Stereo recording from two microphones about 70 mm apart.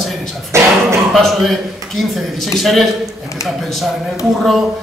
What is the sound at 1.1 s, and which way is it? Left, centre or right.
A man's voice, centre.